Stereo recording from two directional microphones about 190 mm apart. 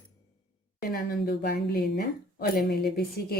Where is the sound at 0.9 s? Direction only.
55° left (ahead or behind).